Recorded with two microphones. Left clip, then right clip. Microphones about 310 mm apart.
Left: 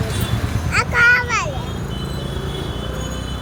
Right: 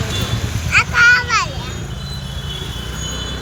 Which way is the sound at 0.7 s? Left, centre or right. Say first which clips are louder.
Right 3 dB; centre.